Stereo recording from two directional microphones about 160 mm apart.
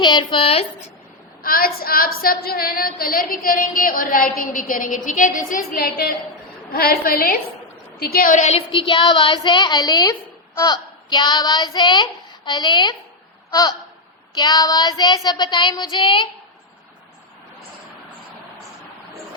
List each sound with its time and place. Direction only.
0.0 s a woman's voice: 30° left (ahead or behind)
1.4 s a woman's voice: 65° left (ahead or behind); by 10.2 s 25° left (ahead or behind)
10.6 s child singing: 25° left (ahead or behind)
13.5 s a sound: 25° left (ahead or behind)
14.3 s child singing: 25° left (ahead or behind)